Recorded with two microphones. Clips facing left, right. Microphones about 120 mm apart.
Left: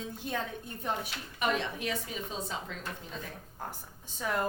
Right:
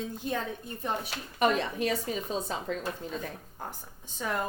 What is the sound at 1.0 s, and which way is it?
Speech, 40° right (ahead or behind).